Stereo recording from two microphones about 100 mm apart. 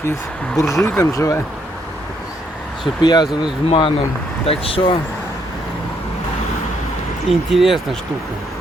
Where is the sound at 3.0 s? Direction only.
45° left (ahead or behind).